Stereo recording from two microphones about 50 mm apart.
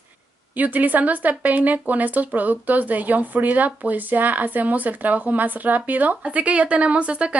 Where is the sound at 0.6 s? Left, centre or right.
Right.